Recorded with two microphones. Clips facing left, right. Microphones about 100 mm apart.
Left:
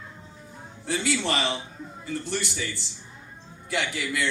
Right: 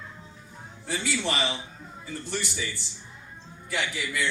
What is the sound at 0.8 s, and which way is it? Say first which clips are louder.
A man's voice: left 3 dB; 70° left (ahead or behind).